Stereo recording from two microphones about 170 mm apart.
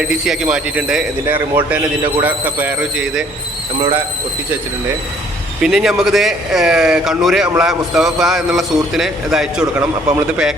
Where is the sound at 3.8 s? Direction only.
15° right (ahead or behind).